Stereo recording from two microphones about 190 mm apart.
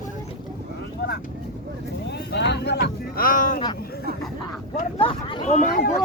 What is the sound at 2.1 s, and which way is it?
Speech, 65° left (ahead or behind).